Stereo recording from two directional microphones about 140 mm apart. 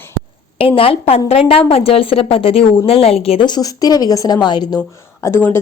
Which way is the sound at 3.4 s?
30° left (ahead or behind).